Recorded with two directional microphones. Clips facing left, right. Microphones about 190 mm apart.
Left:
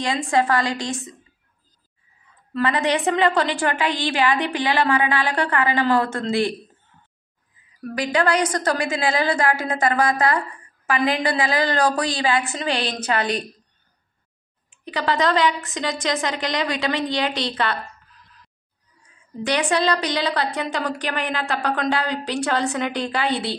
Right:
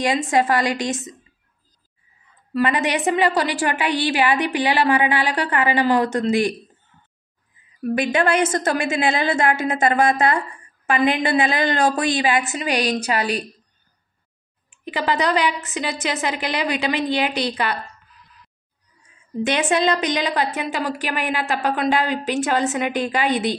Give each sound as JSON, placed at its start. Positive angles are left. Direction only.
{"t": 0.0, "sound": "a woman's voice", "side_deg": -15}
{"t": 2.5, "sound": "a woman's voice", "side_deg": -15}
{"t": 7.9, "sound": "a woman's voice", "side_deg": -25}
{"t": 14.9, "sound": "a woman's voice", "side_deg": -15}
{"t": 19.4, "sound": "a woman's voice", "side_deg": -25}